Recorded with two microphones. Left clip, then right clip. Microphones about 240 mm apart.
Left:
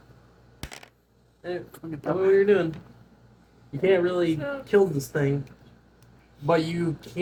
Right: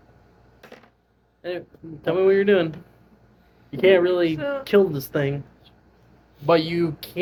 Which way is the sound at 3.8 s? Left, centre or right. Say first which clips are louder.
Right 5 dB; right.